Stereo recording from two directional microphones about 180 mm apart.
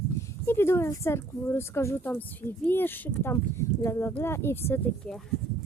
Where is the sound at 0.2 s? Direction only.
15° left (ahead or behind).